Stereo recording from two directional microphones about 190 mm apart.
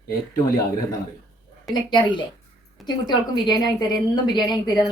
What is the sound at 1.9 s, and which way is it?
A woman's voice, 25° left (ahead or behind).